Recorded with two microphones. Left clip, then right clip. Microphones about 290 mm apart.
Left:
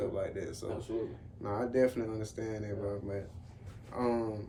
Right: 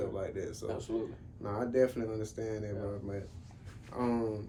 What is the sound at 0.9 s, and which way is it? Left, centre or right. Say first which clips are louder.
Speech: even; right.